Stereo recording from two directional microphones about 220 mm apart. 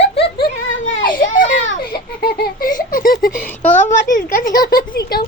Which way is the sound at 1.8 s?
45° left (ahead or behind).